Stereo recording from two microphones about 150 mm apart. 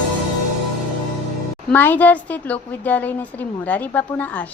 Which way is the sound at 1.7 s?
10° left (ahead or behind).